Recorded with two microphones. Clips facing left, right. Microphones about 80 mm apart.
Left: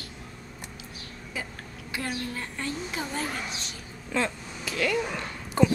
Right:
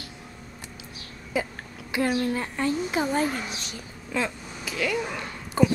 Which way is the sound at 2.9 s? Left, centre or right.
Right.